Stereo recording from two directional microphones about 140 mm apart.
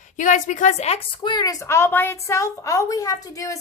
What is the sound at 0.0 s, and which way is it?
A woman's voice, 65° left (ahead or behind).